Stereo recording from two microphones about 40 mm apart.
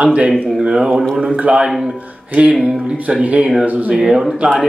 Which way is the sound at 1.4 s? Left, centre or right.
Right.